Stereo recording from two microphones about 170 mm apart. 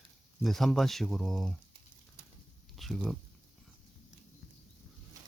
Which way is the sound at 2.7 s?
Centre (ahead or behind).